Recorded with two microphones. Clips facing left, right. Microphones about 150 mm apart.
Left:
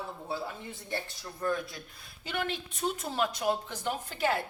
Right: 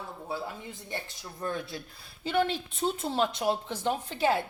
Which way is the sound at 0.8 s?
20° right (ahead or behind).